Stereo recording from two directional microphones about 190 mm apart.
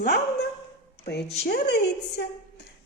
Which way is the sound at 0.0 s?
55° left (ahead or behind).